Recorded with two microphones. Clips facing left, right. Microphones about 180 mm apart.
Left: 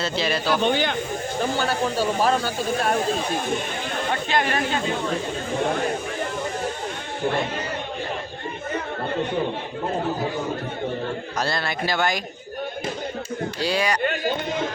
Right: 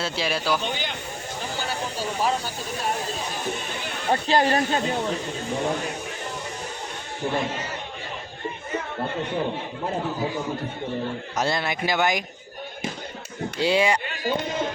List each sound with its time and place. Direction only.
0.0 s a man's voice: 10° right (ahead or behind)
0.6 s speech: 60° left (ahead or behind)
4.1 s speech: 35° right (ahead or behind)
11.3 s a man's voice: 20° right (ahead or behind)
13.6 s speech: 25° right (ahead or behind)